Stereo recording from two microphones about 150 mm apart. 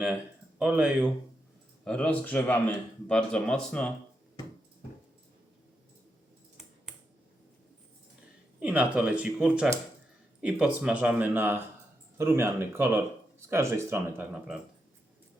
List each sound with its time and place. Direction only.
0.6 s speech: 10° right (ahead or behind)
1.8 s speech: 5° left (ahead or behind)
8.5 s speech: 10° right (ahead or behind)